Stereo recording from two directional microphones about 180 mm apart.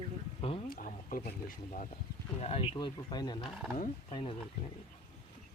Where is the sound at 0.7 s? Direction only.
50° left (ahead or behind).